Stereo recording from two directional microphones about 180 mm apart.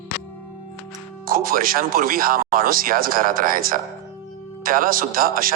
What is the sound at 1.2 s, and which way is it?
Speech, 50° right (ahead or behind).